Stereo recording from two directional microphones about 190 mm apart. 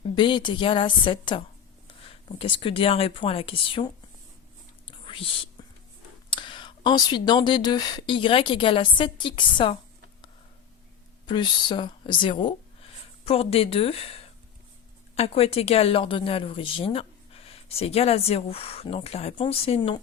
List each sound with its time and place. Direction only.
0.2 s speech: 25° left (ahead or behind)
4.9 s whispering: 30° left (ahead or behind)
6.3 s speech: 25° left (ahead or behind)
11.3 s speech: 25° left (ahead or behind)